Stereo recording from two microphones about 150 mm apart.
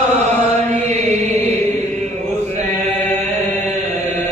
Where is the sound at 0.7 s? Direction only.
45° right (ahead or behind).